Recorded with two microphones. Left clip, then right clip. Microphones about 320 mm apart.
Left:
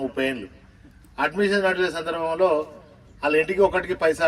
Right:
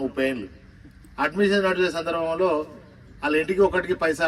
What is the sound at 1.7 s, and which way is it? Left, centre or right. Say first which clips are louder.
A man's voice: right 1 dB; centre.